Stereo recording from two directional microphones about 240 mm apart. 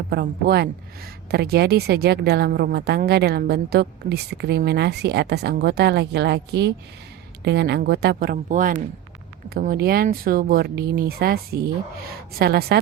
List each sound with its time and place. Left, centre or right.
0.1 s a woman's voice: right